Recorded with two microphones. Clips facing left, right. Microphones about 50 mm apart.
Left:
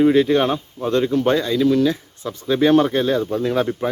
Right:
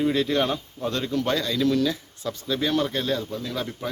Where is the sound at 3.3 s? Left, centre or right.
Left.